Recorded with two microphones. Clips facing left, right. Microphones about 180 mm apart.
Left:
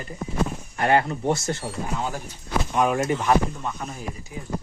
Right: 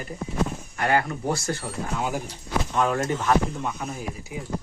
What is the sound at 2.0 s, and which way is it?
Speech, 10° right (ahead or behind).